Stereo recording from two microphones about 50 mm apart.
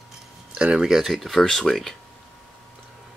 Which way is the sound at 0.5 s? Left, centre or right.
Centre.